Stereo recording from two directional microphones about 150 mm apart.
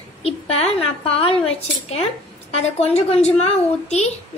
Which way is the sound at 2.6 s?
45° left (ahead or behind).